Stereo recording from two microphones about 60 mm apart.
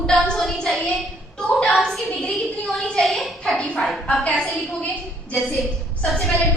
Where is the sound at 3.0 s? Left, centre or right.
Centre.